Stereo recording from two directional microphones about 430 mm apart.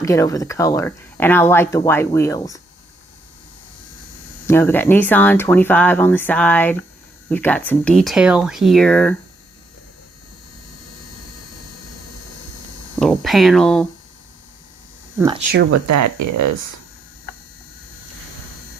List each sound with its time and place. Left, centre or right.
0.0 s speech: centre
4.4 s speech: centre
13.0 s speech: centre
15.9 s speech: right